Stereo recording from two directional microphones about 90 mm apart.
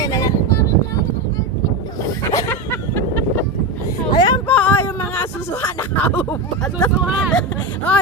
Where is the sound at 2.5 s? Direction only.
25° left (ahead or behind).